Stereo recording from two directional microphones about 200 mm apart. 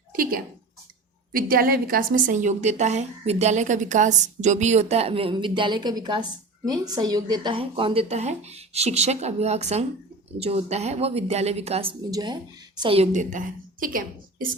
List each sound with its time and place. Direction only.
0.1 s a woman's voice: 45° right (ahead or behind)